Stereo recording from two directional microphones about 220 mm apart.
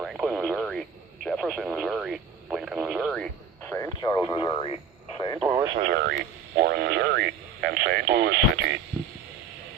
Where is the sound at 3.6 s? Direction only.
10° left (ahead or behind).